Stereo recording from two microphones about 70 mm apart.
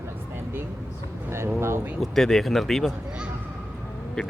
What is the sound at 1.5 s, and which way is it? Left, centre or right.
Speech, right.